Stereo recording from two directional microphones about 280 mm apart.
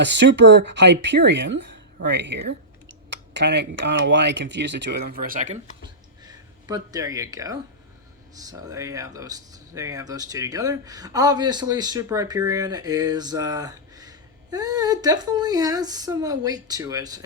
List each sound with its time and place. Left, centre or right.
0.0 s speech: right
6.2 s speech: centre